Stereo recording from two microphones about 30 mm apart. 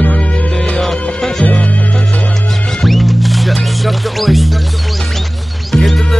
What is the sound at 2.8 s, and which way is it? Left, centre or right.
Music, centre.